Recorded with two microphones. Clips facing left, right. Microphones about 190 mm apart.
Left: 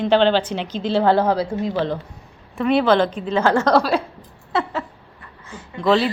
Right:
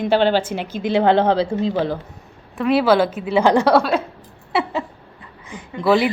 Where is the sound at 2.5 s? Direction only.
5° right (ahead or behind).